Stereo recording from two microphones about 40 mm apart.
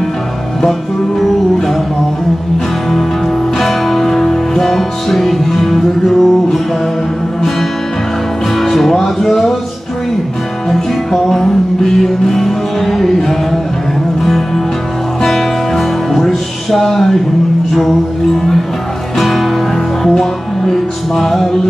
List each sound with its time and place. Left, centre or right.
3.5 s music: centre
8.5 s music: centre
10.7 s music: centre
15.2 s music: centre
19.1 s music: centre